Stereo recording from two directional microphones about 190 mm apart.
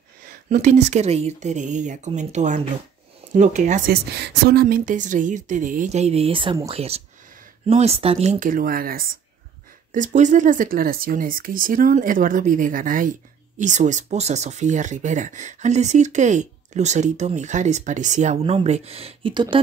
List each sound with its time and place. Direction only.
0.5 s speech: 40° right (ahead or behind)
3.9 s speech: 60° right (ahead or behind); by 19.6 s 25° right (ahead or behind)